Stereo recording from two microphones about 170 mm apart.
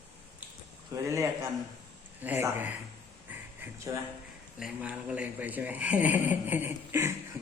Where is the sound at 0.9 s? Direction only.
15° right (ahead or behind).